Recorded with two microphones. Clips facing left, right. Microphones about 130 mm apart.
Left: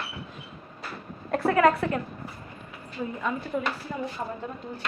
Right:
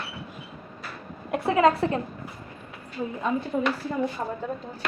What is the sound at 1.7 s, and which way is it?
Speech, 30° right (ahead or behind).